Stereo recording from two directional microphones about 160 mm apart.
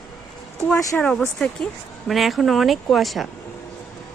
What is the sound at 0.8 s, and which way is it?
Speech, 20° left (ahead or behind).